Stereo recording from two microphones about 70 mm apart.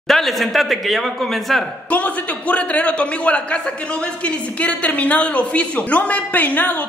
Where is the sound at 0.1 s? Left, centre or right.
Centre.